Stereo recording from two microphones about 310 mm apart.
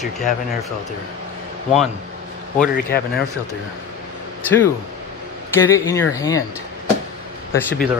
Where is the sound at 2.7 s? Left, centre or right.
Left.